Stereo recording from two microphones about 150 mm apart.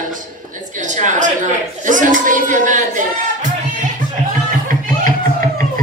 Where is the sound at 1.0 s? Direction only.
55° right (ahead or behind).